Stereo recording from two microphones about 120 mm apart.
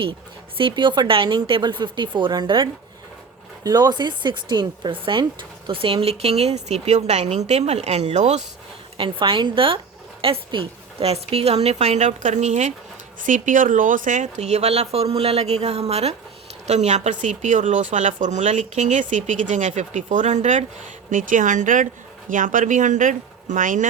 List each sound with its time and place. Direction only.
0.0 s speech: 45° right (ahead or behind); by 8.4 s 75° right (ahead or behind)
9.0 s speech: 45° right (ahead or behind); by 12.7 s 75° right (ahead or behind)
13.2 s speech: 90° right; by 16.1 s 60° right (ahead or behind)
16.6 s speech: 75° right (ahead or behind); by 23.9 s 90° right